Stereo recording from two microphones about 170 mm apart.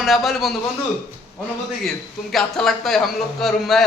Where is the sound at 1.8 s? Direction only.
Centre (ahead or behind).